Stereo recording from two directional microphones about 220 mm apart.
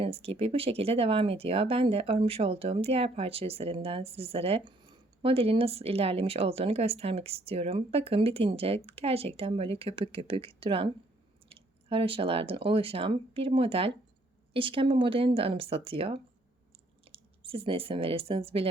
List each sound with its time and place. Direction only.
0.0 s speech: 25° right (ahead or behind)